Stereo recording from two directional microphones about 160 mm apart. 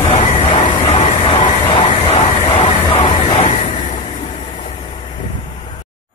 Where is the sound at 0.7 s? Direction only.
30° left (ahead or behind).